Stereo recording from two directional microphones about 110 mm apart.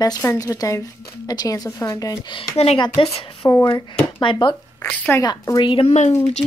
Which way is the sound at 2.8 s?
55° left (ahead or behind).